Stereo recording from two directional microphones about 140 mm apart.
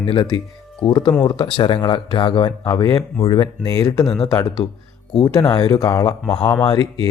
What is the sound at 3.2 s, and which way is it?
Speech, 35° left (ahead or behind).